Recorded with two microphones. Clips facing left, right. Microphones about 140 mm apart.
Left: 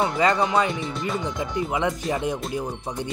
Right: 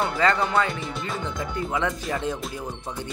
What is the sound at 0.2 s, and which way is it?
Speech, 15° left (ahead or behind).